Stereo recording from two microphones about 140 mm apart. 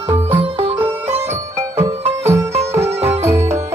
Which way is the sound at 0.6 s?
45° right (ahead or behind).